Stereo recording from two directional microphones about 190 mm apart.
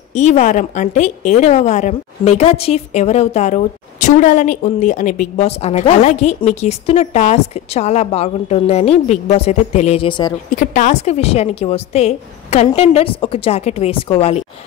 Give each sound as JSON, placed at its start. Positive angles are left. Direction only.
{"t": 0.1, "sound": "a woman's voice", "side_deg": 40}
{"t": 10.5, "sound": "a woman's voice", "side_deg": 40}